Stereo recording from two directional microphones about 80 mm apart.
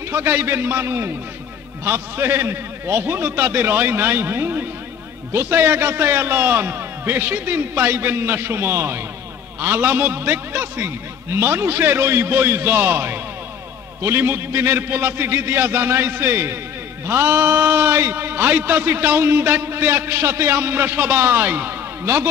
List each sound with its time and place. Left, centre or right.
0.1 s a man's voice: right